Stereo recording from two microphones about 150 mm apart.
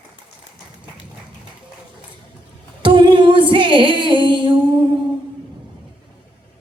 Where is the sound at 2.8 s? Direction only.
35° right (ahead or behind).